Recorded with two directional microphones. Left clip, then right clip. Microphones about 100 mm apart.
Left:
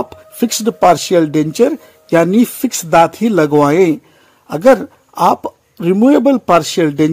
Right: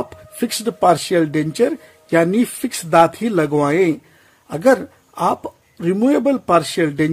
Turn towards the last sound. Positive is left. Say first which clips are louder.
# left 5 dB
turn(degrees=40)  # may be behind; listen again after turning